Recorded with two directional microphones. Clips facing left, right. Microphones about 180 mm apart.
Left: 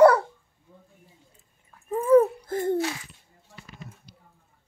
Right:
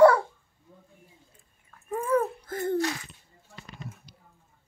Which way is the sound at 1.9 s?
25° left (ahead or behind).